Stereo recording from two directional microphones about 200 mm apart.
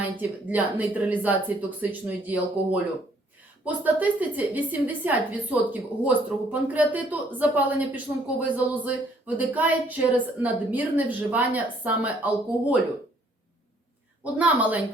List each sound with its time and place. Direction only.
0.0 s a woman's voice: 10° right (ahead or behind)
14.3 s a woman's voice: 5° right (ahead or behind)